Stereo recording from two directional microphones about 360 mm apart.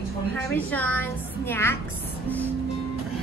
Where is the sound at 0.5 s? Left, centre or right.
Centre.